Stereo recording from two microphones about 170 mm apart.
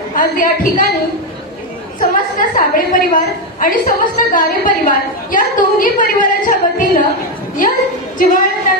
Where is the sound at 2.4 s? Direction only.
50° left (ahead or behind).